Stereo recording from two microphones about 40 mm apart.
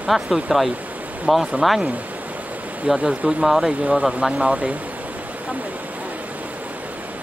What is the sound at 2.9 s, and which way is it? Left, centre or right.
Speech, right.